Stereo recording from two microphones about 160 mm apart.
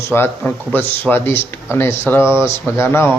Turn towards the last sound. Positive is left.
turn(degrees=15)  # may be behind; listen again after turning